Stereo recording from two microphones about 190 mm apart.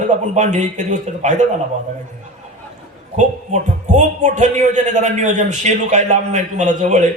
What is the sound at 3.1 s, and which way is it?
Speech, 40° right (ahead or behind).